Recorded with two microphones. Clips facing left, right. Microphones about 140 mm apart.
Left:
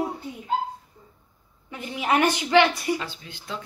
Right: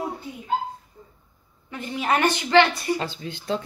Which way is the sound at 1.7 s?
10° left (ahead or behind).